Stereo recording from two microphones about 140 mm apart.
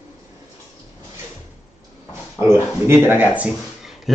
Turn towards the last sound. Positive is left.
turn(degrees=-15)  # may be behind; listen again after turning